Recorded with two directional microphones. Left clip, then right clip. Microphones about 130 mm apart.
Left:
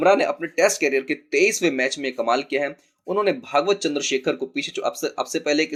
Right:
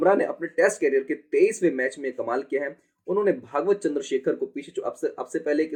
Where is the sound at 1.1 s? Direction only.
25° left (ahead or behind).